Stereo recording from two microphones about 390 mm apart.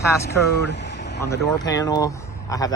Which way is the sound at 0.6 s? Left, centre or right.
Left.